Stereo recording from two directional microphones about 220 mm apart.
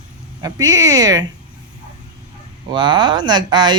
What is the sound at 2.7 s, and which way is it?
Speech, 20° right (ahead or behind).